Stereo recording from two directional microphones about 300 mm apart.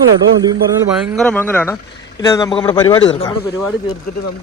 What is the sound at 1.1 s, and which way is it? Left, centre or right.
A man's voice, centre.